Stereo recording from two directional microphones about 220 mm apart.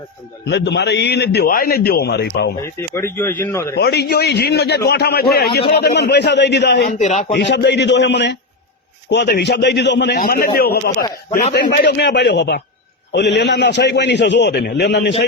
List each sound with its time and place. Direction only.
0.5 s a man's voice: 50° left (ahead or behind)
2.6 s speech: 10° left (ahead or behind)
3.8 s a man's voice: 50° left (ahead or behind)
7.0 s speech: 35° left (ahead or behind)
7.3 s a man's voice: 50° left (ahead or behind)